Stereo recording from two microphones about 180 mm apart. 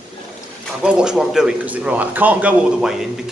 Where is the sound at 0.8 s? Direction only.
5° right (ahead or behind).